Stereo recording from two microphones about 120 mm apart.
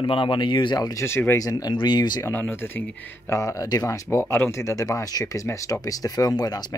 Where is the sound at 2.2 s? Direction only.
15° left (ahead or behind).